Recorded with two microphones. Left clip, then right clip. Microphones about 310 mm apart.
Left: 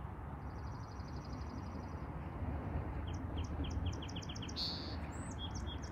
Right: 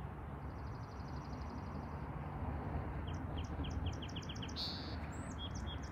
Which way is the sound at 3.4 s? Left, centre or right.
Right.